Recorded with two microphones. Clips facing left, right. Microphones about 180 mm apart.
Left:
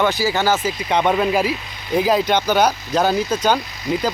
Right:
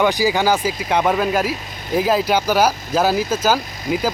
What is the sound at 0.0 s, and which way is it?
Speech, 15° right (ahead or behind).